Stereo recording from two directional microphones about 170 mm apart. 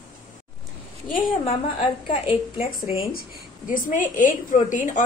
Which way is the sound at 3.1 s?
55° left (ahead or behind).